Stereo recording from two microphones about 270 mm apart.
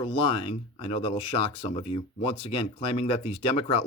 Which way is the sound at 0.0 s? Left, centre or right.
Centre.